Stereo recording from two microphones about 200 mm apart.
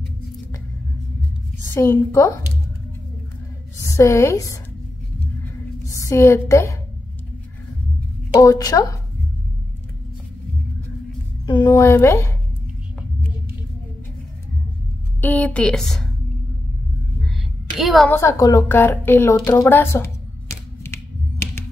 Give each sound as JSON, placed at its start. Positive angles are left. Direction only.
{"t": 1.7, "sound": "a woman's voice", "side_deg": 15}
{"t": 3.8, "sound": "a woman's voice", "side_deg": 15}
{"t": 5.4, "sound": "a sound", "side_deg": 15}
{"t": 8.3, "sound": "a woman's voice", "side_deg": 15}
{"t": 11.4, "sound": "a woman's voice", "side_deg": 20}
{"t": 15.1, "sound": "speech", "side_deg": 10}
{"t": 17.7, "sound": "speech", "side_deg": 0}
{"t": 18.1, "sound": "a sound", "side_deg": 15}